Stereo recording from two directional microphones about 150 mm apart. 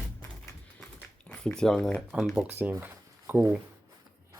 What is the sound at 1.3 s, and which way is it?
Speech, 5° left (ahead or behind).